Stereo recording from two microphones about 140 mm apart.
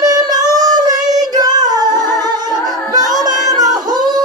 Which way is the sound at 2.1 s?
30° right (ahead or behind).